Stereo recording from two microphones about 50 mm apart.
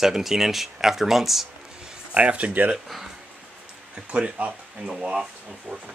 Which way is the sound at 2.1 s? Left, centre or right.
Right.